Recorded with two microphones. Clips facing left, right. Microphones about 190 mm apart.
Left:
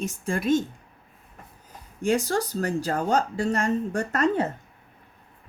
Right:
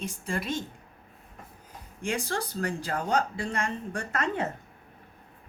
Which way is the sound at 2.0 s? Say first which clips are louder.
Left 7 dB; 40° left (ahead or behind).